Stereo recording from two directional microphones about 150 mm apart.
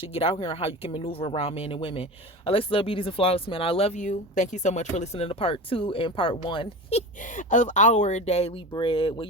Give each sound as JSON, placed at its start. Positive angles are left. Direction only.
{"t": 0.1, "sound": "speech", "side_deg": 40}
{"t": 4.0, "sound": "speech", "side_deg": 55}
{"t": 7.2, "sound": "speech", "side_deg": 60}